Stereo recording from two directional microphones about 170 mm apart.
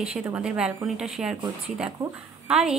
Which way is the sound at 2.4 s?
5° right (ahead or behind).